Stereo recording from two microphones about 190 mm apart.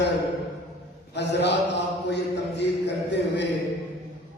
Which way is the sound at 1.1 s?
65° left (ahead or behind).